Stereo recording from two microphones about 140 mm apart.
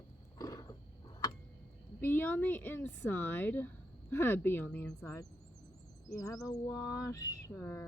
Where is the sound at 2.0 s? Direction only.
15° left (ahead or behind).